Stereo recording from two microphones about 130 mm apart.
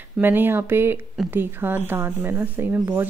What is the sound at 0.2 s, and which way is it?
Speech, 15° right (ahead or behind).